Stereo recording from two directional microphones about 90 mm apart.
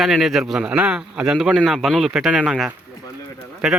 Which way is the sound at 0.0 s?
5° right (ahead or behind).